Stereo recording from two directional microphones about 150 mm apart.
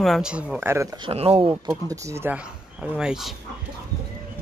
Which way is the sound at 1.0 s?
40° right (ahead or behind).